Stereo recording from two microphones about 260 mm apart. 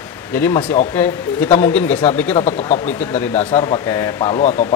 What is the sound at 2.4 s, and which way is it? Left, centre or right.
Speech, left.